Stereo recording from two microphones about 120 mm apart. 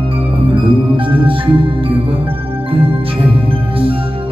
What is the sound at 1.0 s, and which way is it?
Music, 45° right (ahead or behind).